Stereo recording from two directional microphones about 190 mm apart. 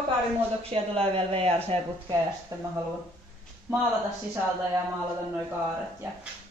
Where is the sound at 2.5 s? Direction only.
15° right (ahead or behind).